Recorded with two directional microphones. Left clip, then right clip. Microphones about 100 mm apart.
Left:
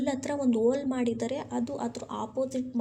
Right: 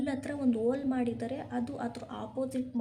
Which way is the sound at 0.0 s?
35° left (ahead or behind).